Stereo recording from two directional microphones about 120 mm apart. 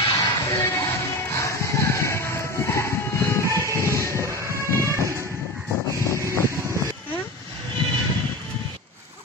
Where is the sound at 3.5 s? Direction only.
25° right (ahead or behind).